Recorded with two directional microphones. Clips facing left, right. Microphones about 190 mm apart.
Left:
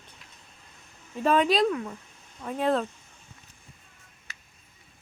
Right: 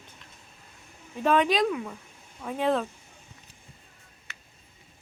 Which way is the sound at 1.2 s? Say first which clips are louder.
Left 1 dB; centre (ahead or behind).